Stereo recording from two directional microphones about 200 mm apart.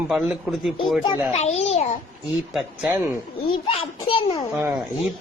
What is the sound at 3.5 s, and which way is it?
Speech, 30° left (ahead or behind).